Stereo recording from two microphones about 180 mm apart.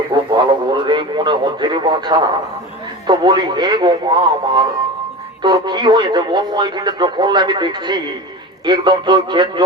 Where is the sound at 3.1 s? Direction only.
20° right (ahead or behind).